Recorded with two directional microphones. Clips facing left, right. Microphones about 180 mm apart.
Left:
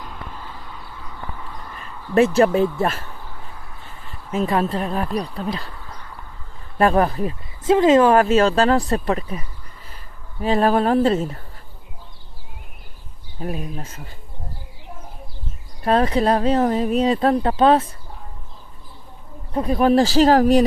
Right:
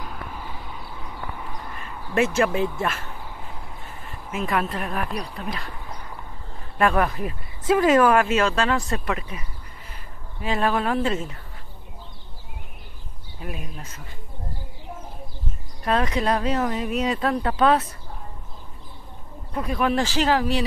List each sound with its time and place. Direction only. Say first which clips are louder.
0.0 s a sound: even; 10° right (ahead or behind)
2.1 s speech: left 6 dB; 35° left (ahead or behind)
4.3 s speech: left 5 dB; 35° left (ahead or behind)
6.8 s speech: left 4 dB; 35° left (ahead or behind)
8.2 s speech: left 5 dB; 35° left (ahead or behind)
13.4 s speech: left 7 dB; 40° left (ahead or behind)
15.8 s speech: left 5 dB; 35° left (ahead or behind)
19.5 s speech: left 7 dB; 35° left (ahead or behind)